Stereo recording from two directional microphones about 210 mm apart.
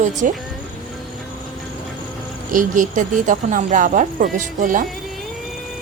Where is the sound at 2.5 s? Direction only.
40° right (ahead or behind).